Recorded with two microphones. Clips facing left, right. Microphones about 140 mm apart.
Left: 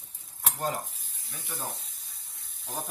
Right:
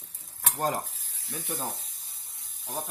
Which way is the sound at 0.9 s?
90° right.